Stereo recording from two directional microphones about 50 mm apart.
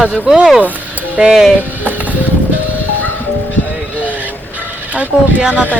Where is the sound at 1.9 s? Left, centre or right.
Right.